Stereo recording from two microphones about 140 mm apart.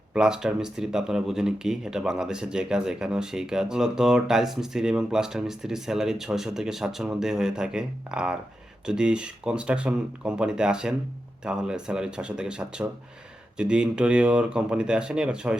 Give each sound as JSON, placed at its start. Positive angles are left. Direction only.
{"t": 0.1, "sound": "speech", "side_deg": -5}